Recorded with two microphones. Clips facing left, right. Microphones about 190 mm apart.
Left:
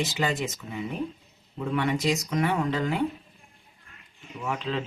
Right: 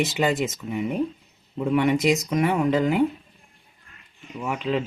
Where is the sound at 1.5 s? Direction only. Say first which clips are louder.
Right 6 dB; 20° right (ahead or behind).